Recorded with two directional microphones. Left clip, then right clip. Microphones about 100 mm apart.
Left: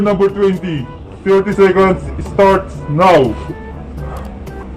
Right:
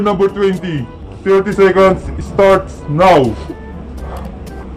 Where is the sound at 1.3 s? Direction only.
40° right (ahead or behind).